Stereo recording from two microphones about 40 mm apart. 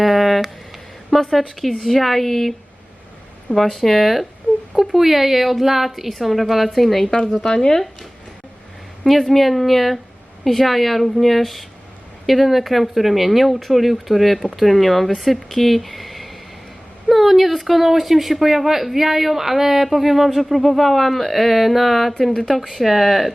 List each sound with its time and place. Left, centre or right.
0.0 s a sound: centre
1.1 s speech: centre
7.5 s speech: centre
9.0 s speech: centre